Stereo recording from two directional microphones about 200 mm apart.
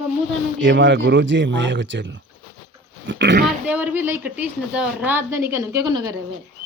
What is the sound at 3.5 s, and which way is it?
A woman's voice, 5° right (ahead or behind).